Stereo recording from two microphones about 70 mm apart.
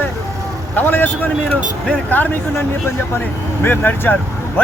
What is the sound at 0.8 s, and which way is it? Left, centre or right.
A man's voice, left.